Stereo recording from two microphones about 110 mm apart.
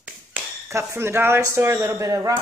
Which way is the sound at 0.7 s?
25° right (ahead or behind).